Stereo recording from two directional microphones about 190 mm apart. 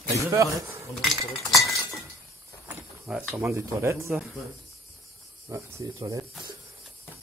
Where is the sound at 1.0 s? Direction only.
Centre (ahead or behind).